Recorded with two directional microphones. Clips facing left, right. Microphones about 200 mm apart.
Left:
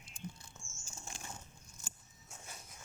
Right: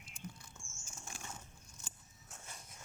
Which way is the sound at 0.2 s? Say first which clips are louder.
Left 2 dB; 20° left (ahead or behind).